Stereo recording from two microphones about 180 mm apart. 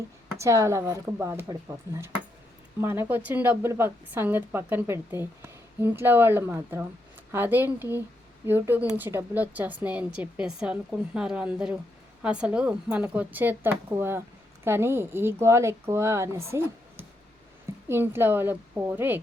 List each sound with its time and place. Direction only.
0.3 s a woman's voice: 15° right (ahead or behind)